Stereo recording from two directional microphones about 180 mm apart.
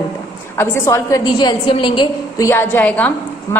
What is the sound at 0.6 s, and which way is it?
A woman's voice, 15° left (ahead or behind).